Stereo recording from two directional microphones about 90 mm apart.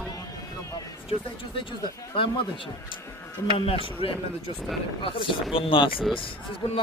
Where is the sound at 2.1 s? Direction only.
70° left (ahead or behind).